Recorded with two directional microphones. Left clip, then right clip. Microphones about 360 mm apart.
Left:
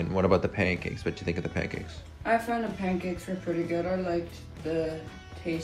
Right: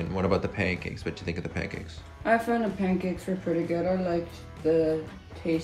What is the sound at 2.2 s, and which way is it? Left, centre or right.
Speech, right.